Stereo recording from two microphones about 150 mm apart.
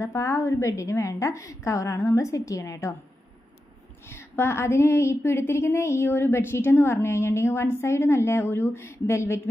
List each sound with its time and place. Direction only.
0.0 s a woman's voice: 20° left (ahead or behind)
4.1 s a woman's voice: 15° left (ahead or behind)